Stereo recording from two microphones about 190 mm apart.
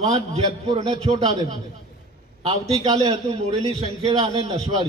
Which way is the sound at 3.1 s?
30° right (ahead or behind).